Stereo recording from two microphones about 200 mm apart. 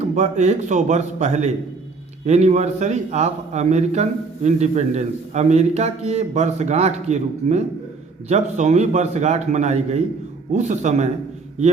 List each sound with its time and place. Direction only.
0.0 s a man's voice: 35° right (ahead or behind)